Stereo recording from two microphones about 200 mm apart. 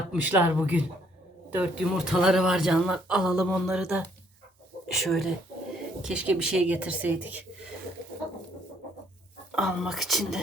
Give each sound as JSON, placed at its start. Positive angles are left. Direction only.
{"t": 0.1, "sound": "speech", "side_deg": -10}
{"t": 5.0, "sound": "speech", "side_deg": 0}
{"t": 9.5, "sound": "speech", "side_deg": 0}